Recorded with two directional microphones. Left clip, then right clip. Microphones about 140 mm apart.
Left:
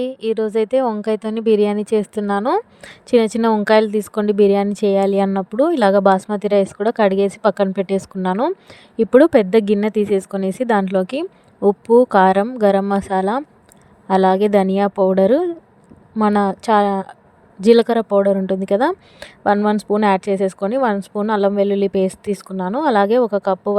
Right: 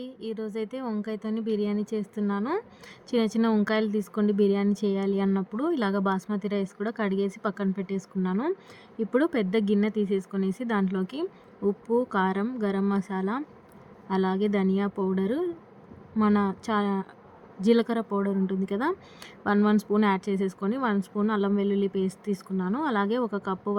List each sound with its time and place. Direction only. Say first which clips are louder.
0.0 s speech: left 15 dB; 90° left
2.8 s speech: left 13 dB; 70° left (ahead or behind); by 8.4 s 90° left
8.7 s speech: left 14 dB; 65° left (ahead or behind)